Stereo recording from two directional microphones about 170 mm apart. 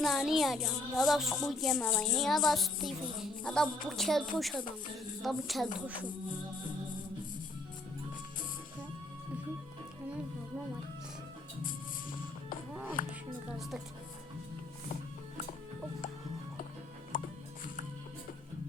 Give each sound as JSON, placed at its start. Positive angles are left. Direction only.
{"t": 0.0, "sound": "a sound", "side_deg": 0}
{"t": 13.0, "sound": "music", "side_deg": 50}
{"t": 13.6, "sound": "speech", "side_deg": 0}
{"t": 17.1, "sound": "music", "side_deg": 55}